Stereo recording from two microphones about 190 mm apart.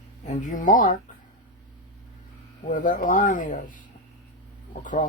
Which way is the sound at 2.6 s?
45° left (ahead or behind).